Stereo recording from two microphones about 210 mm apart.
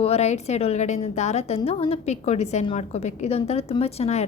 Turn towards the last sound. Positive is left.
turn(degrees=30)  # may be behind; listen again after turning